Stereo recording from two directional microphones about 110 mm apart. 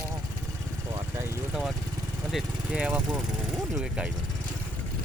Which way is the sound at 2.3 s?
5° right (ahead or behind).